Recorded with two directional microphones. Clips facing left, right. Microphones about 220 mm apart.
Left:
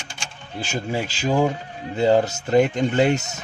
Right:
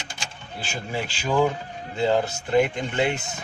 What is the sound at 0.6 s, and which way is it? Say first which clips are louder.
Speech: left 4 dB; 40° left (ahead or behind).